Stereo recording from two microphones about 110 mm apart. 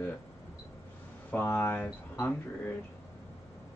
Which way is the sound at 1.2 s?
15° left (ahead or behind).